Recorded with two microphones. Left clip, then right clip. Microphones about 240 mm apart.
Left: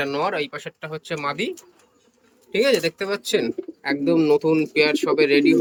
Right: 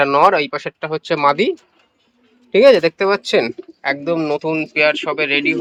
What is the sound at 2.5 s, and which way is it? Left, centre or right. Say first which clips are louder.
Speech: right 9 dB; centre.